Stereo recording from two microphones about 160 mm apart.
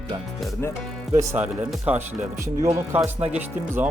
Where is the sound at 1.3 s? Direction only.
15° right (ahead or behind).